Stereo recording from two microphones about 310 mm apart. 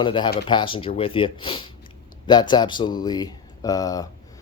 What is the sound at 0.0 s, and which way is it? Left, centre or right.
Speech, centre.